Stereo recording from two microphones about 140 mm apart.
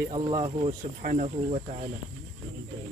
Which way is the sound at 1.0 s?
70° right (ahead or behind).